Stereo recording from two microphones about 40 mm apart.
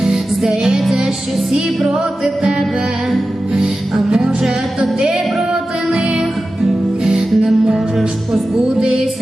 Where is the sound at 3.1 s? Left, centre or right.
Centre.